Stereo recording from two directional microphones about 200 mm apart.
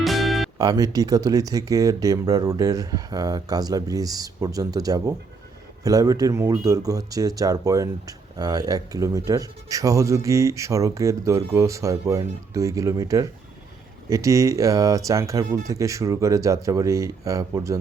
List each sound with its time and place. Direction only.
0.0 s music: centre (ahead or behind)
0.6 s speech: 20° right (ahead or behind)